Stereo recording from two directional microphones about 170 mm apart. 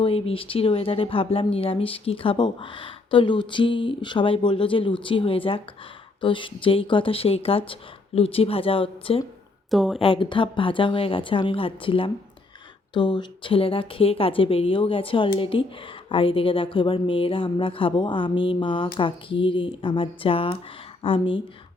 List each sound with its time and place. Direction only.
0.0 s speech: 35° left (ahead or behind)
9.6 s speech: centre (ahead or behind)
10.0 s speech: 30° left (ahead or behind)